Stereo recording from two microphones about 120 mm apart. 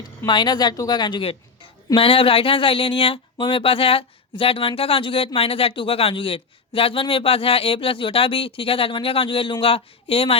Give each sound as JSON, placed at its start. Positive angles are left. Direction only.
{"t": 0.3, "sound": "a woman's voice", "side_deg": 40}